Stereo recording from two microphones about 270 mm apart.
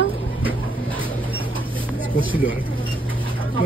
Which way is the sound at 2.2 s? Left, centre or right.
Centre.